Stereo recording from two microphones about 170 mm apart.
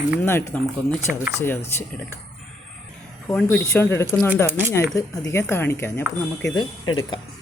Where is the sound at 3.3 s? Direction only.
5° left (ahead or behind).